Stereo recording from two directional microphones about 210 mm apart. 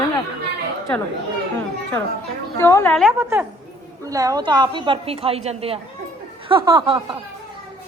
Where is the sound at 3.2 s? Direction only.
10° right (ahead or behind).